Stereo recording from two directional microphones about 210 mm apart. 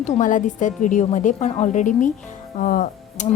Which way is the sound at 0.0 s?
35° left (ahead or behind).